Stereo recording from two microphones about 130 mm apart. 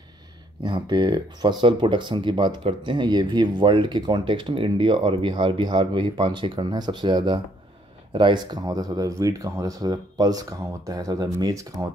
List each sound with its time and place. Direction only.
0.7 s speech: 40° right (ahead or behind)